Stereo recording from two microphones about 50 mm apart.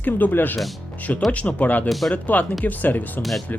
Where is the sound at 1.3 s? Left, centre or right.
Left.